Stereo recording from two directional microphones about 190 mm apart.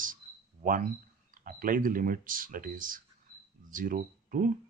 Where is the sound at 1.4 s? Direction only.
45° right (ahead or behind).